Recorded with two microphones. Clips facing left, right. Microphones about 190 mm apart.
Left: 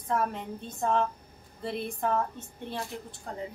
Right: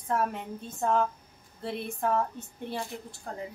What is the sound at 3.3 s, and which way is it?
Speech, 5° right (ahead or behind).